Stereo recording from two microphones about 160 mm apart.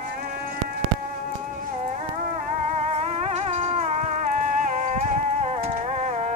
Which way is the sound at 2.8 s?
40° right (ahead or behind).